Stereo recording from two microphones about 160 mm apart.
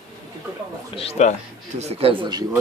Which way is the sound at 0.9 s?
40° left (ahead or behind).